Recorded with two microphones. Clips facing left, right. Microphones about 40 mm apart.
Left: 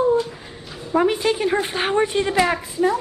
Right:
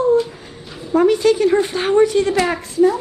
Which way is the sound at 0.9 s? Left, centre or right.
Centre.